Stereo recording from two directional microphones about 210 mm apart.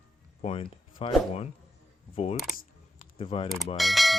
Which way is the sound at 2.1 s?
25° left (ahead or behind).